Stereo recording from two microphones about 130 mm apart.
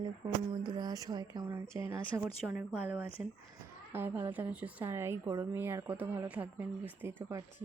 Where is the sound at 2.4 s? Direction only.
10° right (ahead or behind).